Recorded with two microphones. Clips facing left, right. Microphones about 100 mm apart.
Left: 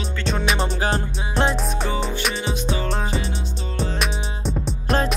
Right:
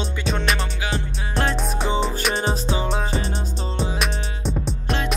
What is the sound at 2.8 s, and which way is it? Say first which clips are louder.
Music: even; centre (ahead or behind).